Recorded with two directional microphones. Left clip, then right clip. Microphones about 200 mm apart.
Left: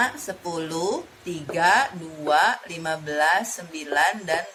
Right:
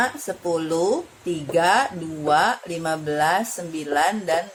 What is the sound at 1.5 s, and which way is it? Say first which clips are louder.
A woman's voice: right 1 dB; 45° right (ahead or behind).